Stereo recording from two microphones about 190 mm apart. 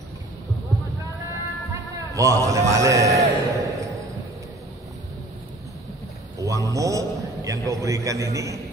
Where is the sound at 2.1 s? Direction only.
15° right (ahead or behind).